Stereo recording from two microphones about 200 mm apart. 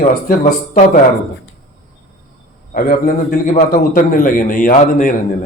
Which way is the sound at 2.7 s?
45° left (ahead or behind).